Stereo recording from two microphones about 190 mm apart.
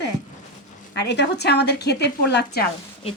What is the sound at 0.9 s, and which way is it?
A woman's voice, 65° left (ahead or behind).